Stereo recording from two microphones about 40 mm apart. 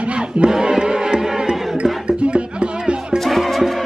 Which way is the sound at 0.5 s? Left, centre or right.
Centre.